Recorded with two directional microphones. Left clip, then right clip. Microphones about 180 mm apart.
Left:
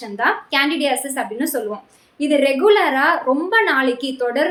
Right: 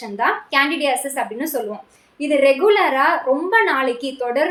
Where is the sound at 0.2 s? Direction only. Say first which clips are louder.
Even; 20° left (ahead or behind).